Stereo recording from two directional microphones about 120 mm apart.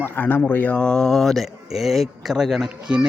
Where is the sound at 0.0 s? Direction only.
15° left (ahead or behind).